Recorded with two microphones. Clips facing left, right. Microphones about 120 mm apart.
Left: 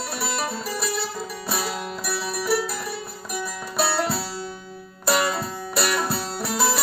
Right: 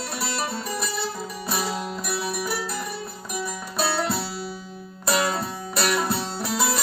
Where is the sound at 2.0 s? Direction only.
Centre (ahead or behind).